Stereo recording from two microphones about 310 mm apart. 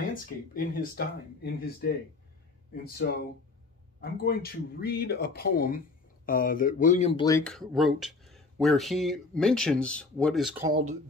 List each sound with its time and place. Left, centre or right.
0.1 s speech: left; by 10.7 s centre